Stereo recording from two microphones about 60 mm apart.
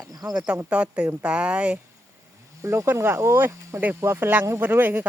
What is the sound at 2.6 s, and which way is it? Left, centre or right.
Speech, right.